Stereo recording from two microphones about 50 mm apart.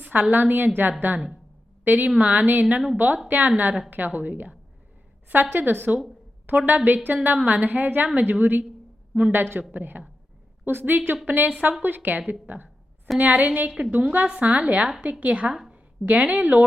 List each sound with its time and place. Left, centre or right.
0.0 s a woman's voice: right